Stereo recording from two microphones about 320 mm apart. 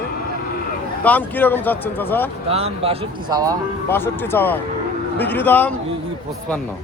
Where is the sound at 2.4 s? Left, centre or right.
Centre.